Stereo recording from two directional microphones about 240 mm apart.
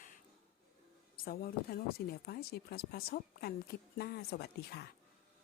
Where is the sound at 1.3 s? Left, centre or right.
Left.